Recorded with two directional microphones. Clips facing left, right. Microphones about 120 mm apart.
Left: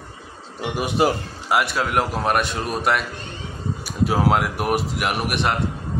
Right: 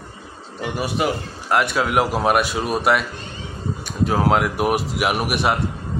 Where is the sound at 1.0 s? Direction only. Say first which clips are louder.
Left 3 dB; 30° left (ahead or behind).